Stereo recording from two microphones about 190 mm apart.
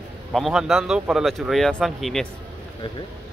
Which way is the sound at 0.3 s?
Centre (ahead or behind).